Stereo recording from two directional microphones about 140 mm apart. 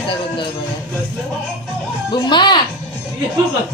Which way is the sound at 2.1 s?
35° left (ahead or behind).